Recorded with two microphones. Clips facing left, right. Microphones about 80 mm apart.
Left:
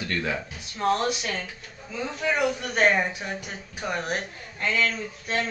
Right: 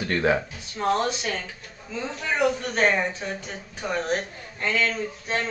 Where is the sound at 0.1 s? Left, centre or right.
Right.